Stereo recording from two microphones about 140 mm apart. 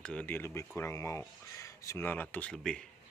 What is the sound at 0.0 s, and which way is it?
Speech, 10° left (ahead or behind).